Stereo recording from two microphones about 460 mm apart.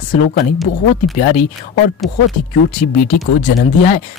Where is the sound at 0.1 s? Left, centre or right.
Centre.